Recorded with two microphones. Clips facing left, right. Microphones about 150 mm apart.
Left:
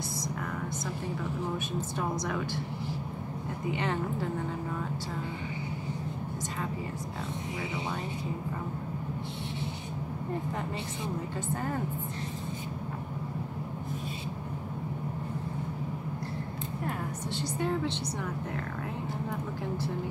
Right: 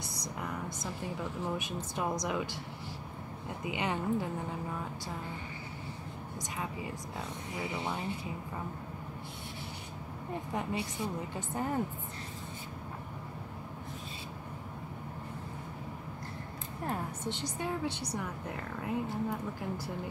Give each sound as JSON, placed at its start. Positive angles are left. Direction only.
{"t": 2.0, "sound": "a woman's voice", "side_deg": -15}
{"t": 3.7, "sound": "a woman's voice", "side_deg": -15}
{"t": 17.4, "sound": "a woman's voice", "side_deg": -10}